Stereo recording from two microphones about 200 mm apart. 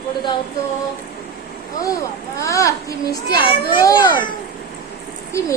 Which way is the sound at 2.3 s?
15° left (ahead or behind).